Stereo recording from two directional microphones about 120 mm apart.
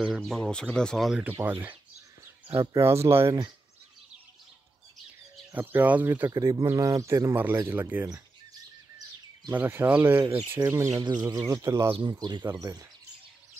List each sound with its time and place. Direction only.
0.0 s speech: 5° left (ahead or behind)
1.4 s speech: 15° right (ahead or behind)
5.5 s speech: 15° right (ahead or behind)
6.3 s speech: 30° right (ahead or behind)
9.5 s speech: 20° right (ahead or behind)
11.9 s speech: 40° right (ahead or behind)
12.4 s speech: 25° right (ahead or behind)